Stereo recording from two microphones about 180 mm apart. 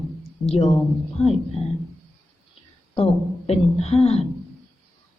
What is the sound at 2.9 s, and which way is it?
Speech, 35° left (ahead or behind).